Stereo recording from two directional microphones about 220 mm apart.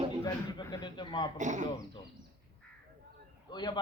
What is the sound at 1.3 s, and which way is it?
Speech, 35° right (ahead or behind).